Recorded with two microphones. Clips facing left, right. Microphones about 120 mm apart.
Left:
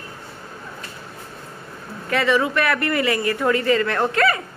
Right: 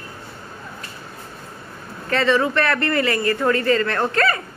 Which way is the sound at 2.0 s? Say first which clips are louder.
Right 1 dB; 10° left (ahead or behind).